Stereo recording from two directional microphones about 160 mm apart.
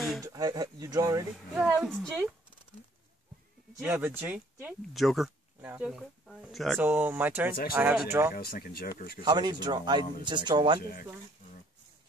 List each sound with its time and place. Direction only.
0.2 s speech: 25° right (ahead or behind)
1.8 s speech: 5° right (ahead or behind)
3.8 s speech: 15° right (ahead or behind)
6.8 s speech: 10° right (ahead or behind)
8.4 s speech: 75° left (ahead or behind)
9.2 s speech: 25° right (ahead or behind)
10.8 s speech: 65° left (ahead or behind)